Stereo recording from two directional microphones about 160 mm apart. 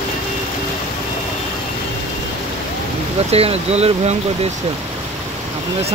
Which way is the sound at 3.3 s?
40° right (ahead or behind).